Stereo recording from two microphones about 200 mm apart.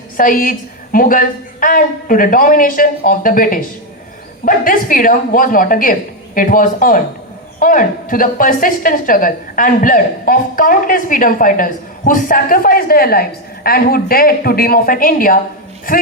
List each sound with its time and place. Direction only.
0.2 s a woman's voice: 45° left (ahead or behind)